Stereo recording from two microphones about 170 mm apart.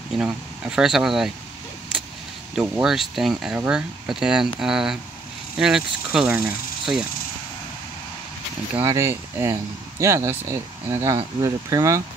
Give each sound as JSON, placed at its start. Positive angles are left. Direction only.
{"t": 0.1, "sound": "speech", "side_deg": -5}
{"t": 2.7, "sound": "speech", "side_deg": 0}
{"t": 8.8, "sound": "speech", "side_deg": -15}